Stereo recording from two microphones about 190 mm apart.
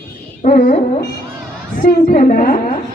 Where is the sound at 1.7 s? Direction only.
45° left (ahead or behind).